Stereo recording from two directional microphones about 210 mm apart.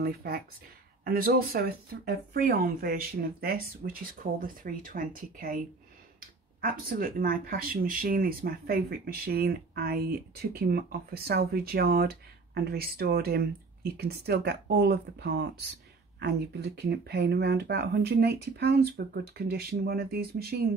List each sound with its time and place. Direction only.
0.0 s speech: 45° right (ahead or behind)